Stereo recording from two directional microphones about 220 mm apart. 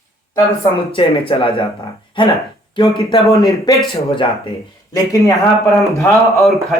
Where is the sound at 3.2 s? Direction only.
Centre (ahead or behind).